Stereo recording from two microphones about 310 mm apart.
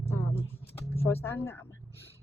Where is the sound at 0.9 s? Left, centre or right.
Centre.